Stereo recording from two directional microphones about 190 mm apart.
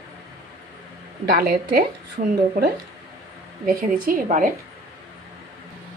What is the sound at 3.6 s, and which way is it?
Speech, 50° right (ahead or behind).